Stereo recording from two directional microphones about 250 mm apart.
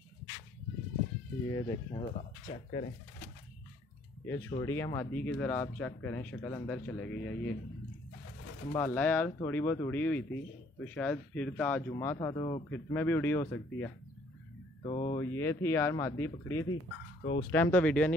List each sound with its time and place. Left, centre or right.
1.5 s speech: centre
2.1 s speech: left
4.6 s speech: centre
8.7 s speech: centre
14.8 s speech: left
15.1 s speech: centre